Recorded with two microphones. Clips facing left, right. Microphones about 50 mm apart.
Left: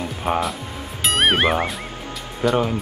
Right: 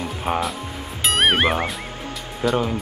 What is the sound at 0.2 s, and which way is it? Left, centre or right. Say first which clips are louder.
Speech: left 2 dB; centre.